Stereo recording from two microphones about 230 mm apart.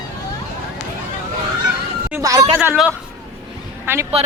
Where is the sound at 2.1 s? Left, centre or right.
Centre.